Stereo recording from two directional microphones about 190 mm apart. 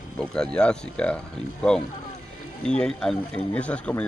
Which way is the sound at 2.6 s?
5° left (ahead or behind).